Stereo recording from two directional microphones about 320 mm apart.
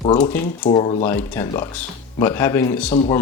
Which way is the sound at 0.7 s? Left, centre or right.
Centre.